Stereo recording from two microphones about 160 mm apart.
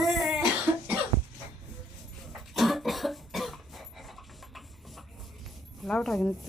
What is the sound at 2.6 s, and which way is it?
Cough, centre (ahead or behind).